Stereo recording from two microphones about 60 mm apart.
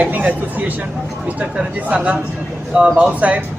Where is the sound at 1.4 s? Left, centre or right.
Right.